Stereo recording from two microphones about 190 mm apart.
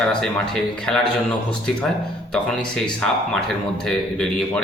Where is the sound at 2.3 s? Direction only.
5° left (ahead or behind).